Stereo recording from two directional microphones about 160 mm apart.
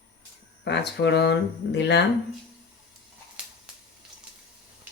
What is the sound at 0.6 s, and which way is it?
Speech, 90° left.